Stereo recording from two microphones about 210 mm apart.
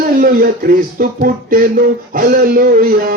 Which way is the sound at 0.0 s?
40° right (ahead or behind).